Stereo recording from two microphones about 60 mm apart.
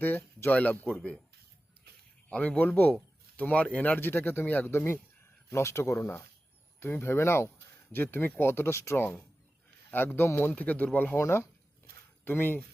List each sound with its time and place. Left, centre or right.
0.0 s speech: left; by 1.1 s centre
2.3 s speech: left
4.7 s speech: left
7.9 s speech: left
9.9 s speech: left
10.5 s speech: left